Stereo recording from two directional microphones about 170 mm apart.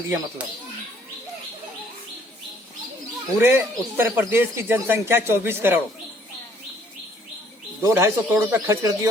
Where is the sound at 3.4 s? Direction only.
15° right (ahead or behind).